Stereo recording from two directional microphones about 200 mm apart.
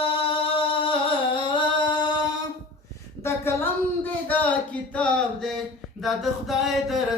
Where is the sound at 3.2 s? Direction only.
15° left (ahead or behind).